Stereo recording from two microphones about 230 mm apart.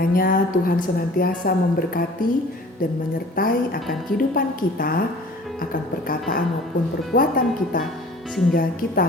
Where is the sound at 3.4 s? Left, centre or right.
Left.